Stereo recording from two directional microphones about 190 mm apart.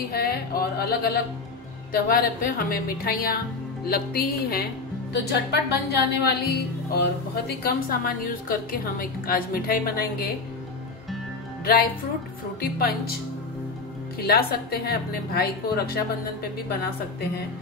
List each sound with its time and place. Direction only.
0.1 s a woman's voice: 50° left (ahead or behind)
11.6 s a woman's voice: 50° left (ahead or behind)
14.2 s speech: 55° left (ahead or behind)